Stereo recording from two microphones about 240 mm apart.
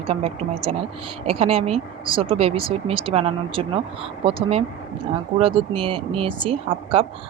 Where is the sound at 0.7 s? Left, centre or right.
Right.